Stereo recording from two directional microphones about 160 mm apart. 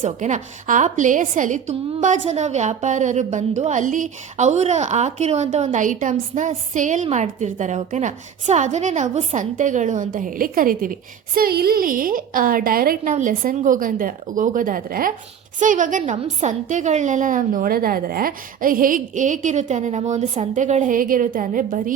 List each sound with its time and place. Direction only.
0.0 s a woman's voice: 50° right (ahead or behind)
11.3 s a woman's voice: 75° right (ahead or behind)
15.5 s a woman's voice: 55° right (ahead or behind)